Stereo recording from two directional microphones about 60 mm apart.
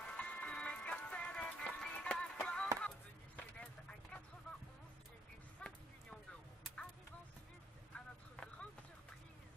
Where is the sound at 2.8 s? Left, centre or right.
Centre.